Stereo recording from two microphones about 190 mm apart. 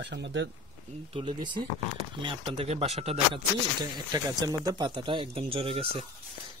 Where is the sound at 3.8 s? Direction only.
20° right (ahead or behind).